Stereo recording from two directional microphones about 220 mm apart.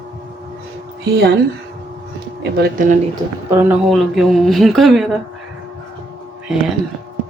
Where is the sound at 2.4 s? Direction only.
40° right (ahead or behind).